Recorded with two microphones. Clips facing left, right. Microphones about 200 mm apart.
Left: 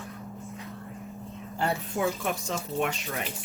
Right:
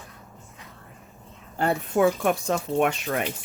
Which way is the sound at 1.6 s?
55° right (ahead or behind).